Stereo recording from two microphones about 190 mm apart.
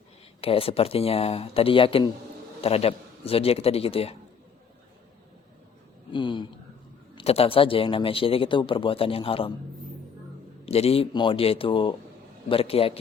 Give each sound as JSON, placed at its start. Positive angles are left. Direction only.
{"t": 0.4, "sound": "speech", "side_deg": 30}
{"t": 6.1, "sound": "speech", "side_deg": 25}
{"t": 10.7, "sound": "speech", "side_deg": 30}